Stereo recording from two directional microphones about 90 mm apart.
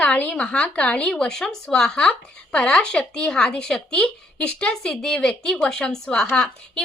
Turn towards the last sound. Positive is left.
turn(degrees=10)  # may be behind; listen again after turning